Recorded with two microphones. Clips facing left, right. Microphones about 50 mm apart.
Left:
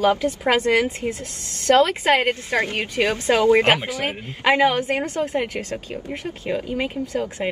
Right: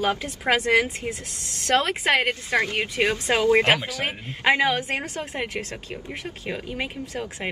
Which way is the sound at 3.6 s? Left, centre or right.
Left.